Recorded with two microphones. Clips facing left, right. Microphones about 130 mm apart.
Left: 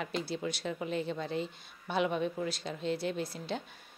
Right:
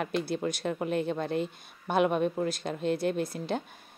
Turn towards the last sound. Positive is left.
turn(degrees=-50)  # may be behind; listen again after turning